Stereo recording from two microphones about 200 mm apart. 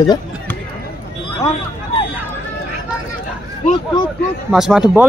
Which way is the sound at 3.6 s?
30° left (ahead or behind).